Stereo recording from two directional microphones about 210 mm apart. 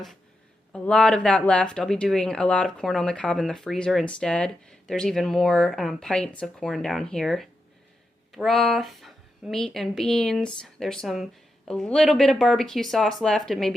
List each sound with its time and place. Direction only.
0.7 s speech: 5° left (ahead or behind)